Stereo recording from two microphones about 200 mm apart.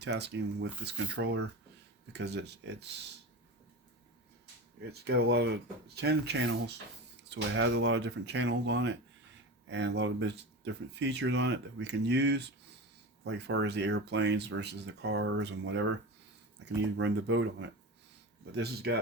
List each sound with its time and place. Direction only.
0.0 s speech: 60° right (ahead or behind)
4.8 s speech: 55° right (ahead or behind)
18.5 s speech: 55° right (ahead or behind)